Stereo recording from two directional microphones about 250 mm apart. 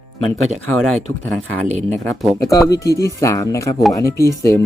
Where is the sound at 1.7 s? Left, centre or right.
Right.